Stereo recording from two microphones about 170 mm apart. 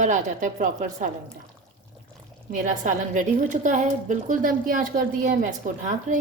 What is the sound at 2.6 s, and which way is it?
A woman's voice, 50° right (ahead or behind).